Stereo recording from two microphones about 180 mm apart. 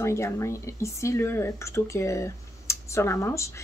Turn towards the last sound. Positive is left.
turn(degrees=15)  # may be behind; listen again after turning